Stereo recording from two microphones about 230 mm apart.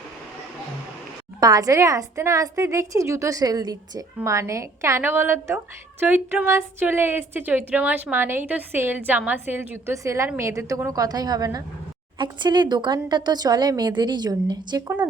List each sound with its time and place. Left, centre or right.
1.4 s a woman's voice: centre